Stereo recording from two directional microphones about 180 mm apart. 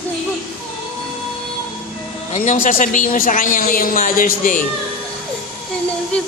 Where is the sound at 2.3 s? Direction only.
45° left (ahead or behind).